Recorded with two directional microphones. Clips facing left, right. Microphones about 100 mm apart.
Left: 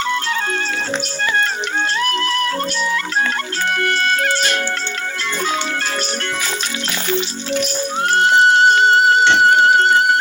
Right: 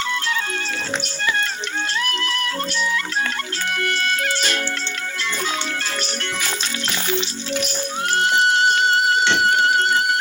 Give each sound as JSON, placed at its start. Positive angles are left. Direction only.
{"t": 1.2, "sound": "music", "side_deg": 40}
{"t": 8.1, "sound": "music", "side_deg": 40}